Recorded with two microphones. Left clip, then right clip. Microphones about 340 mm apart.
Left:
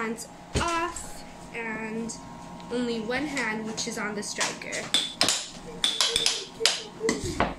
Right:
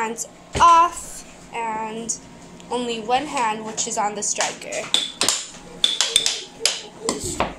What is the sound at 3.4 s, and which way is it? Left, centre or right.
Speech, right.